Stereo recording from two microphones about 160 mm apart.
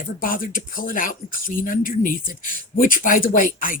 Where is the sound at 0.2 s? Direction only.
60° left (ahead or behind).